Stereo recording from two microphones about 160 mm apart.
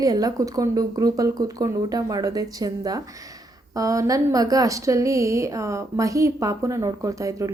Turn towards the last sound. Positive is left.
turn(degrees=-20)  # may be behind; listen again after turning